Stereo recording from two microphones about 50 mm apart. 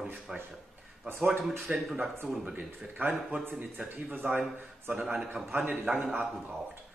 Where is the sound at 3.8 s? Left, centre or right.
Right.